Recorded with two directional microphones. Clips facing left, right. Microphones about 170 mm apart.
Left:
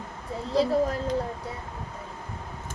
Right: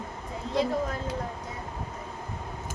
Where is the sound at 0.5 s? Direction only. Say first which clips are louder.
Left 4 dB; 35° left (ahead or behind).